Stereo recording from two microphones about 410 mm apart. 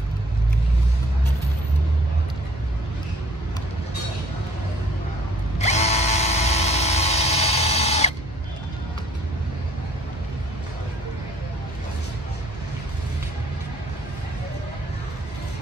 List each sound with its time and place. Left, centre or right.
5.6 s drill: centre